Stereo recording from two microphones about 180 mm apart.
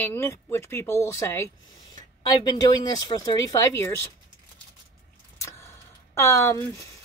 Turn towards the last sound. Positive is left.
turn(degrees=15)  # may be behind; listen again after turning